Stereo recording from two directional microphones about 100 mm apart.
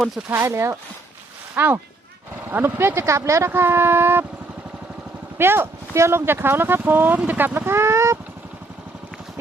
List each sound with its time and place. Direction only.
0.3 s speech: 20° right (ahead or behind)
5.4 s speech: 25° right (ahead or behind)